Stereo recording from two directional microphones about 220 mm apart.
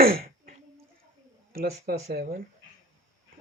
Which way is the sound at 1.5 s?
45° right (ahead or behind).